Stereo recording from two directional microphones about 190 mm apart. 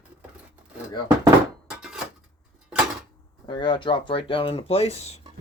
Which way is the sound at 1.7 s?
5° right (ahead or behind).